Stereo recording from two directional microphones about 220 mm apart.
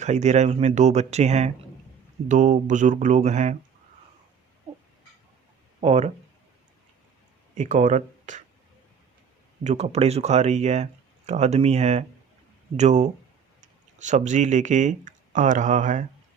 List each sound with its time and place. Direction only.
0.0 s speech: 30° right (ahead or behind)
5.8 s speech: 30° right (ahead or behind)
7.5 s speech: 35° right (ahead or behind)
9.6 s speech: 30° right (ahead or behind)